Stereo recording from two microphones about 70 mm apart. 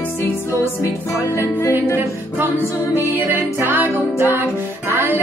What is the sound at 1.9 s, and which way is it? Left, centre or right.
Music, right.